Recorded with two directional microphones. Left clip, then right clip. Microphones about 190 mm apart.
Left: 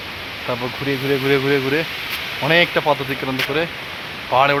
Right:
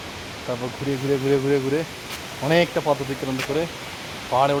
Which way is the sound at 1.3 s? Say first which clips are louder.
Left 4 dB; 20° left (ahead or behind).